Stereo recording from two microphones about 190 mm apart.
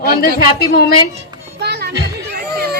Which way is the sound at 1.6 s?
60° right (ahead or behind).